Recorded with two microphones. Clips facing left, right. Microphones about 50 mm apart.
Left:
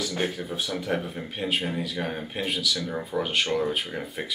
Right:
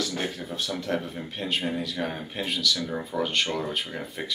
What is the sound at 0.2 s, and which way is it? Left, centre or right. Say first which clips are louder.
Speech: left 2 dB; centre.